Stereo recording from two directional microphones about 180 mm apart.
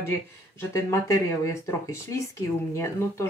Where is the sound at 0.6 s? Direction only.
15° left (ahead or behind).